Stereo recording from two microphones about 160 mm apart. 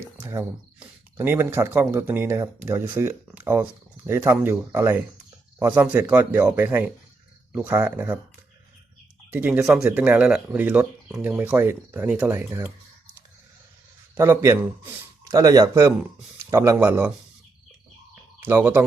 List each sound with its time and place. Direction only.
0.2 s speech: 15° right (ahead or behind)
9.3 s speech: 10° right (ahead or behind)
14.2 s speech: 15° right (ahead or behind)
18.1 s a sound: 15° right (ahead or behind)